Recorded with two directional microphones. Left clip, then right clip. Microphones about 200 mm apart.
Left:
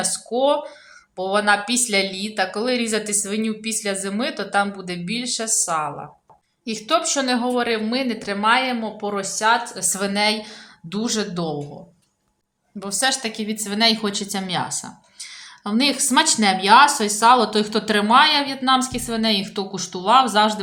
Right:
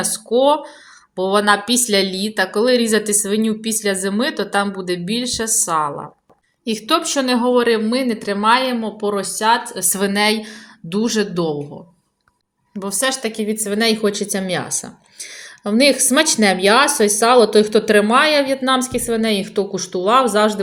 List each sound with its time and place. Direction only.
0.0 s a woman's voice: 20° right (ahead or behind)
12.8 s a woman's voice: 10° right (ahead or behind)